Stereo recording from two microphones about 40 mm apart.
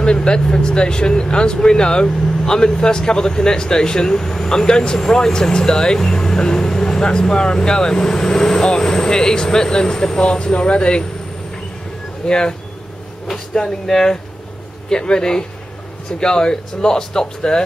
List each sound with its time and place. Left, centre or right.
0.0 s speech: left
12.3 s speech: left